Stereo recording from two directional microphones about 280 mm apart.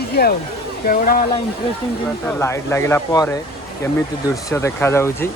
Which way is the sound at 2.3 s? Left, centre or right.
Centre.